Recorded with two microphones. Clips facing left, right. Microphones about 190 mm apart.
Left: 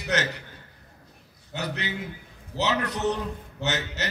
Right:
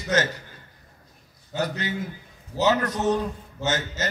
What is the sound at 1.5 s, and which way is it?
A man's voice, 65° left (ahead or behind).